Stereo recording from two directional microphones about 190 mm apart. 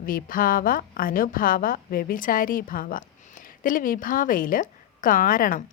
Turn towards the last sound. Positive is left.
turn(degrees=45)  # may be behind; listen again after turning